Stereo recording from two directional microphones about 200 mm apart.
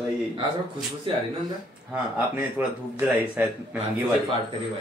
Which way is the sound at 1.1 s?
25° right (ahead or behind).